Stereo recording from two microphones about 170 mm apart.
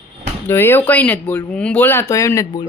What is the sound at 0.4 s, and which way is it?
Speech, 15° left (ahead or behind).